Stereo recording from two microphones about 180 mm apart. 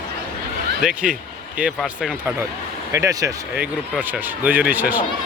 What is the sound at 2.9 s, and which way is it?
Speech, 15° right (ahead or behind).